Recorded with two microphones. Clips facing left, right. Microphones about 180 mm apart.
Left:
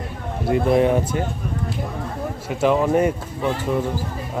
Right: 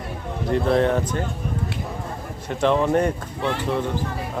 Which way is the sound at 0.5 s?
10° left (ahead or behind).